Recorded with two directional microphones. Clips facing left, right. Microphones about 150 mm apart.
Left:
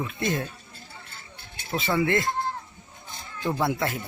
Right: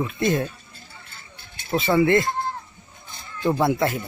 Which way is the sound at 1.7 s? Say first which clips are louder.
Right 6 dB; 65° right (ahead or behind).